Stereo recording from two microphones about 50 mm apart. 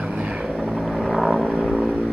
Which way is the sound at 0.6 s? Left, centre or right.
Centre.